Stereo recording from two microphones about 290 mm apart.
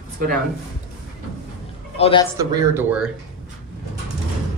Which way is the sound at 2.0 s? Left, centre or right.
Centre.